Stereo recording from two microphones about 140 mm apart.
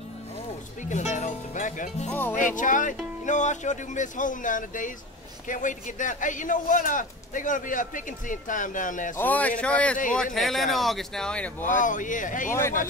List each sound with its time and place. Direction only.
0.8 s speech: 60° left (ahead or behind)
2.0 s speech: 10° left (ahead or behind)
2.3 s a man's voice: 65° left (ahead or behind)
9.1 s speech: 10° left (ahead or behind)
11.6 s a man's voice: 65° left (ahead or behind)